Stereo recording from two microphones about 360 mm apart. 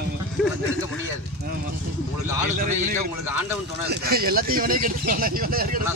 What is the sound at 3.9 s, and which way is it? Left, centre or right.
Speech, right.